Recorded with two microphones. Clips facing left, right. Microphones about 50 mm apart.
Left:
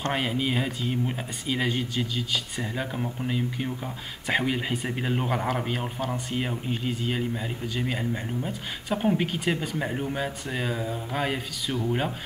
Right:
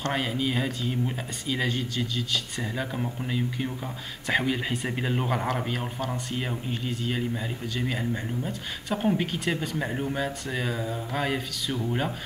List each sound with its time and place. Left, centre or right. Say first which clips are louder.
0.0 s speech: left 1 dB; centre